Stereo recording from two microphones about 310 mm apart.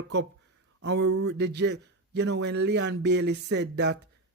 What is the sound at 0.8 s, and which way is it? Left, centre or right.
Speech, right.